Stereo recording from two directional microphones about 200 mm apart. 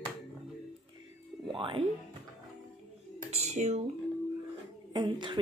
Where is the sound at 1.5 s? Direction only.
25° right (ahead or behind).